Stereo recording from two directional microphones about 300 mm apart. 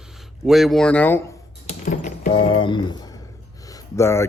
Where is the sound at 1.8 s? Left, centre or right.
Left.